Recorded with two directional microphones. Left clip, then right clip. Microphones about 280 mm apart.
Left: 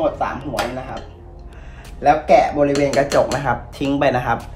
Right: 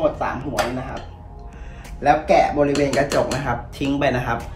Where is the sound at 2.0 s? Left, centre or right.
Centre.